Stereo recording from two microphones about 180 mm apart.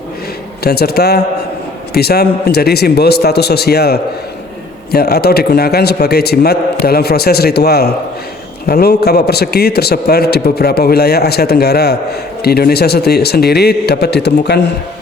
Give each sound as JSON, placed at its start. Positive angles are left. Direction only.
{"t": 0.6, "sound": "a man's voice", "side_deg": 60}